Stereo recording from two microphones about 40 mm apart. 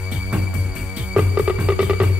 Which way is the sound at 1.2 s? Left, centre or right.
Right.